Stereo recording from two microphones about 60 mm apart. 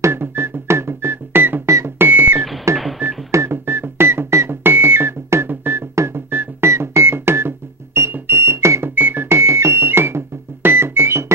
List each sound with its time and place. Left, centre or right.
0.0 s music: right
2.0 s a sound: right
2.7 s telephone dialing: right
3.3 s music: right
6.7 s music: right
8.9 s music: right